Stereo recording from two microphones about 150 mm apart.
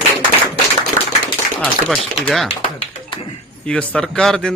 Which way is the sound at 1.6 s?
Centre (ahead or behind).